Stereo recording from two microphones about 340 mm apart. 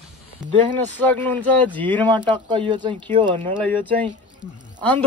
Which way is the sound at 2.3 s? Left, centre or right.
Centre.